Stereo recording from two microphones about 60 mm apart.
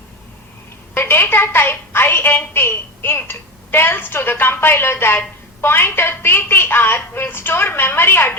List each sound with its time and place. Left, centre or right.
0.9 s a woman's voice: left